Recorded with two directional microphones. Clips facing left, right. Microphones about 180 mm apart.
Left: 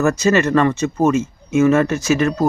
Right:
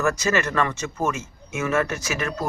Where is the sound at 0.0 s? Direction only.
25° left (ahead or behind).